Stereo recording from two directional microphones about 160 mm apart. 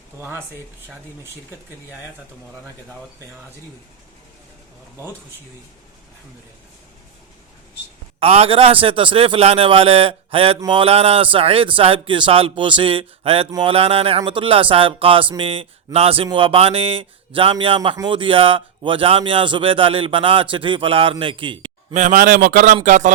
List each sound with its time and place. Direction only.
0.2 s speech: 15° right (ahead or behind)
8.2 s speech: 35° right (ahead or behind)
21.9 s a man's voice: 50° right (ahead or behind)